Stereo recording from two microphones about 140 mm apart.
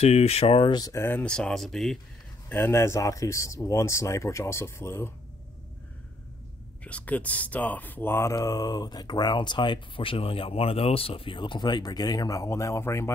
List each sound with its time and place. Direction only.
0.0 s speech: 50° left (ahead or behind); by 1.0 s 25° left (ahead or behind)
1.0 s speech: 10° left (ahead or behind)
2.5 s speech: 15° left (ahead or behind)
6.8 s speech: 10° left (ahead or behind)